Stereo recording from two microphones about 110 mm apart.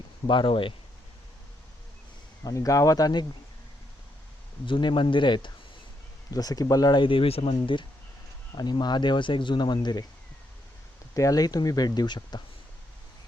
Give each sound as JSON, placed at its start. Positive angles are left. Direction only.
{"t": 0.3, "sound": "speech", "side_deg": 50}
{"t": 2.4, "sound": "speech", "side_deg": 30}
{"t": 4.6, "sound": "speech", "side_deg": 45}
{"t": 6.3, "sound": "speech", "side_deg": 35}
{"t": 8.5, "sound": "speech", "side_deg": 40}
{"t": 11.1, "sound": "speech", "side_deg": 30}